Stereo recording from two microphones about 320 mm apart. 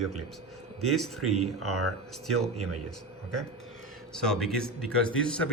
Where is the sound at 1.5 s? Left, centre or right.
Right.